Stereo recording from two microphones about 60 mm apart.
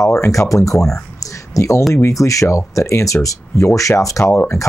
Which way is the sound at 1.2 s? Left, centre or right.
Left.